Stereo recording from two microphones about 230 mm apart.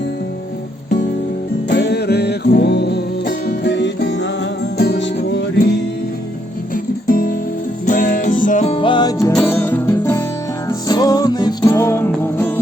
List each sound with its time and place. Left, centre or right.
1.7 s music: left
7.1 s music: left; by 12.5 s centre